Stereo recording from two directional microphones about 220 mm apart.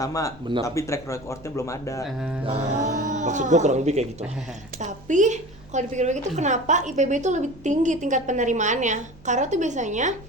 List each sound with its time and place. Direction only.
0.0 s speech: 15° left (ahead or behind)
2.0 s mantra: 5° right (ahead or behind)
2.4 s a woman's voice: 30° right (ahead or behind)